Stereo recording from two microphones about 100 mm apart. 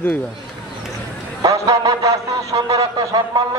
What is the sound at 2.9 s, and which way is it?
Speech, 50° right (ahead or behind).